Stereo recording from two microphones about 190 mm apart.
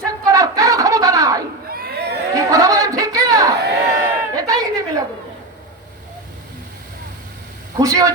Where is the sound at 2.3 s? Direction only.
20° right (ahead or behind).